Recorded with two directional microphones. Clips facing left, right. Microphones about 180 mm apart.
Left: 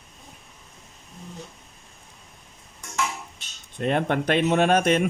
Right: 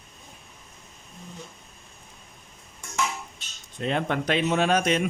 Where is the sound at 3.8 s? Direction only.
50° left (ahead or behind).